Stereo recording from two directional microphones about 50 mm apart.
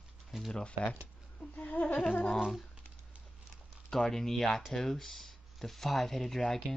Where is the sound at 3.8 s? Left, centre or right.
Centre.